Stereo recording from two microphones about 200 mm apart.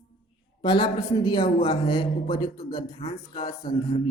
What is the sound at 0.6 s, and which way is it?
Speech, 20° left (ahead or behind).